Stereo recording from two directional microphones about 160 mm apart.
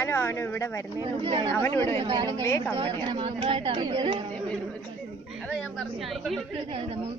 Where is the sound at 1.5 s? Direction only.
15° left (ahead or behind).